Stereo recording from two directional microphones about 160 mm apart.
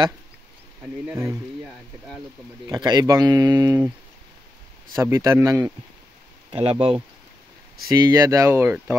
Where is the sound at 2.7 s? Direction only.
25° right (ahead or behind).